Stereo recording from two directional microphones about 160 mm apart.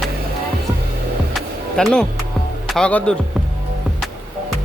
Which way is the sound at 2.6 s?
5° left (ahead or behind).